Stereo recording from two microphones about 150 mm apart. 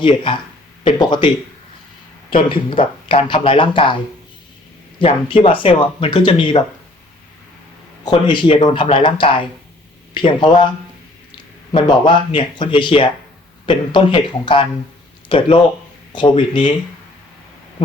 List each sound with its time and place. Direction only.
0.0 s speech: 30° left (ahead or behind)
2.3 s speech: 35° left (ahead or behind)
4.9 s speech: 35° left (ahead or behind)
8.0 s speech: 30° left (ahead or behind)
11.7 s speech: 30° left (ahead or behind)